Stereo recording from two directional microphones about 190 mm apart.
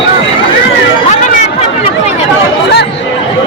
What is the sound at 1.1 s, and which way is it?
Chatter, 40° left (ahead or behind).